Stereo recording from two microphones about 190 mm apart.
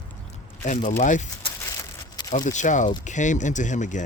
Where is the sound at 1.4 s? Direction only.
20° left (ahead or behind).